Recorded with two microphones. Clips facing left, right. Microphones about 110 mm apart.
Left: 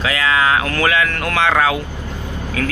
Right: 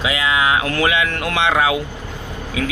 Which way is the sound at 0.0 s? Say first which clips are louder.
Left 1 dB; 15° right (ahead or behind).